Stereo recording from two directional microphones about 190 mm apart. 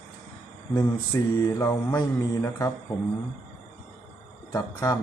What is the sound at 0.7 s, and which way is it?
Mantra, 20° left (ahead or behind).